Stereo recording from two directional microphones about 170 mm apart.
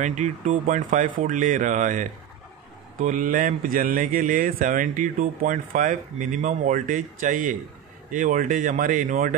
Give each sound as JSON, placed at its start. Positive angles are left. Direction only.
{"t": 0.0, "sound": "speech", "side_deg": -45}